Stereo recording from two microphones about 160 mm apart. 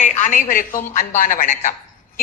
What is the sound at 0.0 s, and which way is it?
A woman's voice, 55° left (ahead or behind).